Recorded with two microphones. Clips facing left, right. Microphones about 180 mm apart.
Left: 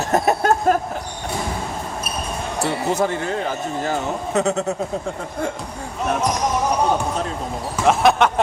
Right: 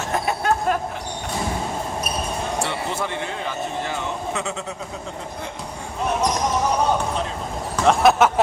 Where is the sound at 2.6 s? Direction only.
40° left (ahead or behind).